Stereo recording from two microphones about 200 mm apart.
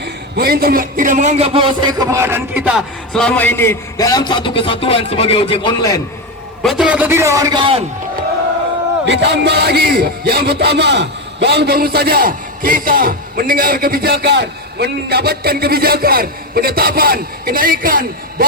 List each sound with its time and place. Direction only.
0.0 s a man's voice: 50° right (ahead or behind); by 6.0 s 20° left (ahead or behind)
6.6 s a man's voice: centre (ahead or behind); by 7.9 s 25° right (ahead or behind)
9.0 s speech: 55° right (ahead or behind)